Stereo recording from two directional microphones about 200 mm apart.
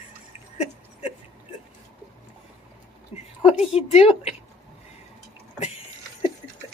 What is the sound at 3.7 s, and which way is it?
Speech, 30° left (ahead or behind).